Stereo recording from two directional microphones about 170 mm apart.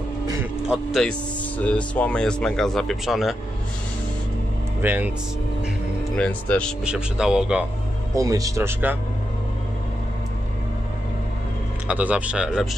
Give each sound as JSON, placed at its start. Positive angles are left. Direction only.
{"t": 0.7, "sound": "speech", "side_deg": 0}
{"t": 4.8, "sound": "speech", "side_deg": -10}
{"t": 6.1, "sound": "speech", "side_deg": 10}
{"t": 6.8, "sound": "speech", "side_deg": -5}
{"t": 8.1, "sound": "speech", "side_deg": -20}
{"t": 11.9, "sound": "speech", "side_deg": -10}